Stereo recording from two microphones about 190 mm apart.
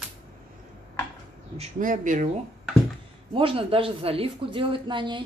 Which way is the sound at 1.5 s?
40° right (ahead or behind).